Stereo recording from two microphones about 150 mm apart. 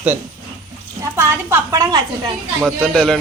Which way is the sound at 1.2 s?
15° right (ahead or behind).